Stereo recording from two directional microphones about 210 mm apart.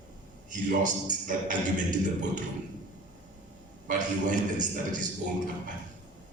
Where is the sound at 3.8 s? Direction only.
35° right (ahead or behind).